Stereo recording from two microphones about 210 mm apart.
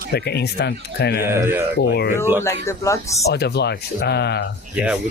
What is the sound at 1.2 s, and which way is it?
Speech, 10° right (ahead or behind).